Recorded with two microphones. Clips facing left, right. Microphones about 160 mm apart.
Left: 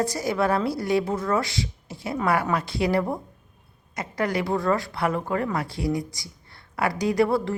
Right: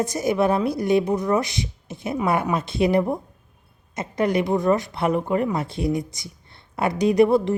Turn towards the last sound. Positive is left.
turn(degrees=-20)  # may be behind; listen again after turning